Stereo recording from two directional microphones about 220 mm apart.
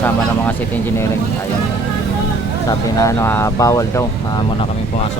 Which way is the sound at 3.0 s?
15° left (ahead or behind).